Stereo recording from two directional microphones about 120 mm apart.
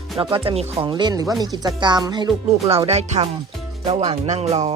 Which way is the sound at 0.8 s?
40° right (ahead or behind).